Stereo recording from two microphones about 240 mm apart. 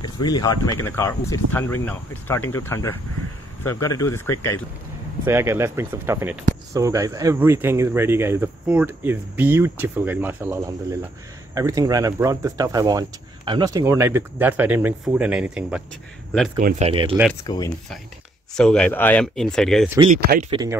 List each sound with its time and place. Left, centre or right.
0.0 s speech: centre
5.2 s speech: centre
16.5 s speech: right
17.4 s speech: centre
18.5 s speech: centre
20.1 s speech: right
20.4 s speech: centre